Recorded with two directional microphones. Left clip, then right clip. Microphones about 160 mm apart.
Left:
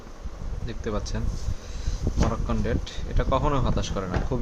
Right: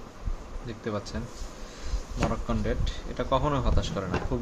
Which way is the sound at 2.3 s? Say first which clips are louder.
Left 2 dB; 15° left (ahead or behind).